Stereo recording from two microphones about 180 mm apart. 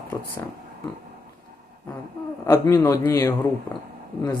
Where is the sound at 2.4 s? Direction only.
15° left (ahead or behind).